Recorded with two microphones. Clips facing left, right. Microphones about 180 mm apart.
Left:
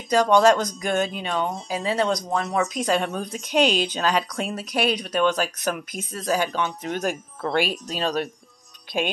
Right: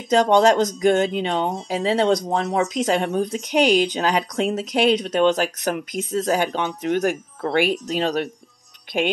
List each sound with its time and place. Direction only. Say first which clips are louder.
0.1 s speech: right 2 dB; 20° right (ahead or behind)